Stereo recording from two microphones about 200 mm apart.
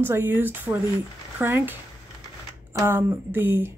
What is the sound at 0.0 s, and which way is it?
A woman's voice, 10° right (ahead or behind).